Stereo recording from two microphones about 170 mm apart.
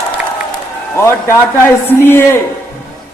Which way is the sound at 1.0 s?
15° left (ahead or behind).